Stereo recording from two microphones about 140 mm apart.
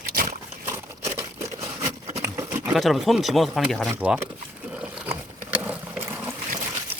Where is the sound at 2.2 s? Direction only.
20° right (ahead or behind).